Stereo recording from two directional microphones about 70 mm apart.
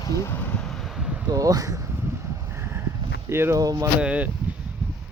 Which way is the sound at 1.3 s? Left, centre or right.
Right.